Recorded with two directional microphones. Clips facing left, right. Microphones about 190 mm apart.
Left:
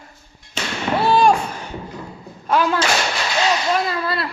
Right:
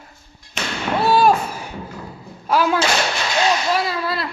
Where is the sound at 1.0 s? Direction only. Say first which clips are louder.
Even; 5° right (ahead or behind).